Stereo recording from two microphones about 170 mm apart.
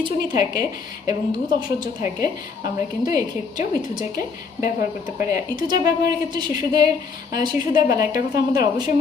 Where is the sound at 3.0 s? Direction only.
20° right (ahead or behind).